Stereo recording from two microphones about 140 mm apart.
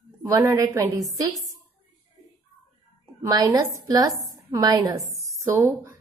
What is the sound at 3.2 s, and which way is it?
A woman's voice, 25° right (ahead or behind).